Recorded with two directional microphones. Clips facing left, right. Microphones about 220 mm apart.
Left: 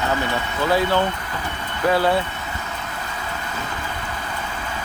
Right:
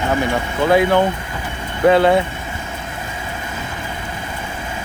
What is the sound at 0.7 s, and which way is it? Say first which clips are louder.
Speech: right 6 dB; 15° right (ahead or behind).